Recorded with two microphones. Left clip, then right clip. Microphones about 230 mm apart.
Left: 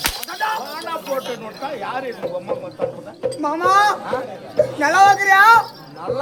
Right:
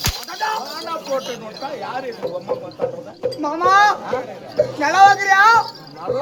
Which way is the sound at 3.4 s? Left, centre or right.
Centre.